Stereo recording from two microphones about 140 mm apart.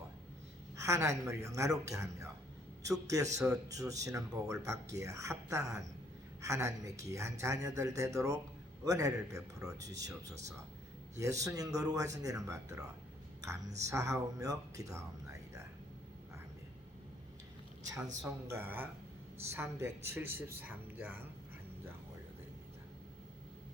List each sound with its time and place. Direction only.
0.8 s a woman's voice: 20° right (ahead or behind)
18.4 s a man's voice: 15° right (ahead or behind)